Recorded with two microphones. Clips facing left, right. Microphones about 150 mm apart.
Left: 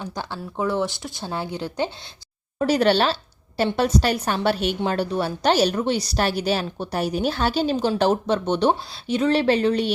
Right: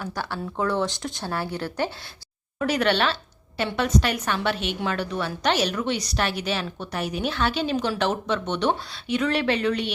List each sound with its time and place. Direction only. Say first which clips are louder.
0.0 s speech: right 1 dB; 15° left (ahead or behind)
2.6 s a woman's voice: left 4 dB; 35° left (ahead or behind)